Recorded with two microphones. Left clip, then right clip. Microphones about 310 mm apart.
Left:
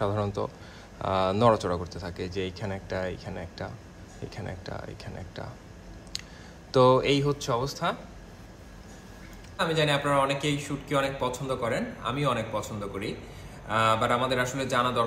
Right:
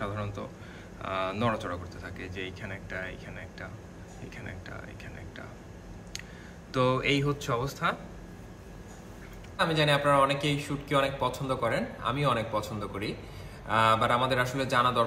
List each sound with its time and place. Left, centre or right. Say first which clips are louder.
0.0 s a sound: left 7 dB; centre
1.0 s speech: left 7 dB; centre
6.7 s speech: left 6 dB; centre
9.6 s a man's voice: even; centre